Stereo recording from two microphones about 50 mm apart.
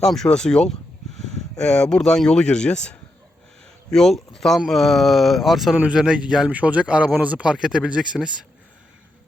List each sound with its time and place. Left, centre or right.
0.0 s speech: centre
3.9 s speech: centre
5.9 s speech: centre
6.5 s speech: right